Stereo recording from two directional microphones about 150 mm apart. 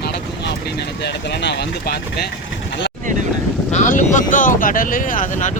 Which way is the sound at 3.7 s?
55° left (ahead or behind).